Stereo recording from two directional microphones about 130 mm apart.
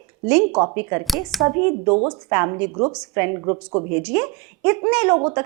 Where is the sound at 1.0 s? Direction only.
Centre (ahead or behind).